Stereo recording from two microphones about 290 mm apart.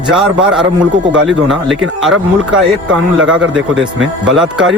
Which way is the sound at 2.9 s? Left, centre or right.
Right.